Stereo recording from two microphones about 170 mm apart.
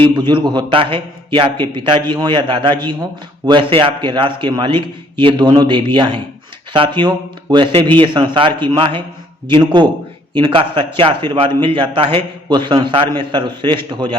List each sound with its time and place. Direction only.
0.0 s a man's voice: 30° right (ahead or behind)